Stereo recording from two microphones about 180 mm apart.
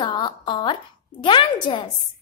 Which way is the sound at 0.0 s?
25° left (ahead or behind).